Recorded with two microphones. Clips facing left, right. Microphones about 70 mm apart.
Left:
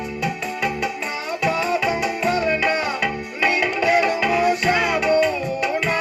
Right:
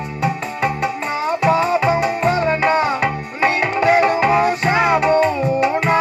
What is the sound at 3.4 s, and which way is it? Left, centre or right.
Music, right.